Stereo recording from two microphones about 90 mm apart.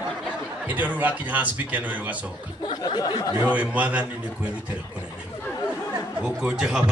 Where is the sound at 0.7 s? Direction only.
20° right (ahead or behind).